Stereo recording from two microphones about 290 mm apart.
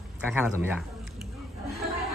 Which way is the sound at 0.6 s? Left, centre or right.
Centre.